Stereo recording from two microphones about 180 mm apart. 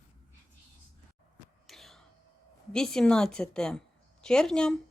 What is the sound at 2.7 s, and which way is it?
A woman's voice, 5° left (ahead or behind).